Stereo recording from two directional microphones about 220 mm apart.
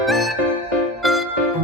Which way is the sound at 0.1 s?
Centre (ahead or behind).